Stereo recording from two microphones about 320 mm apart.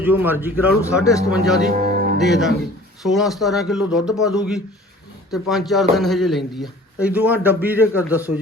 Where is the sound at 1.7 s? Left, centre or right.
Right.